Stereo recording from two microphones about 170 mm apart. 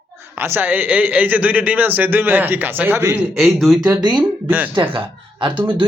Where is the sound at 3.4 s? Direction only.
Centre (ahead or behind).